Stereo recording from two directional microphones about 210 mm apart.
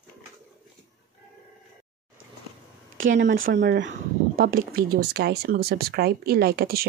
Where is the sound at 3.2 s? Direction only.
50° right (ahead or behind).